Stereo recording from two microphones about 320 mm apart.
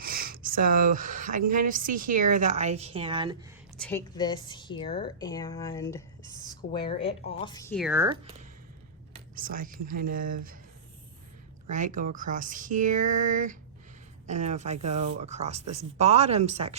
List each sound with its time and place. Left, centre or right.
0.0 s a sound: right
1.5 s a woman's voice: right
3.8 s a woman's voice: centre; by 10.6 s right
11.7 s a woman's voice: right